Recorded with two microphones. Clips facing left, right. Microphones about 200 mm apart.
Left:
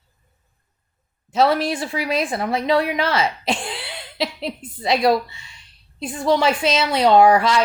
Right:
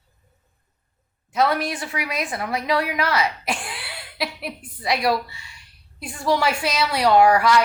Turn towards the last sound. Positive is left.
turn(degrees=25)  # may be behind; listen again after turning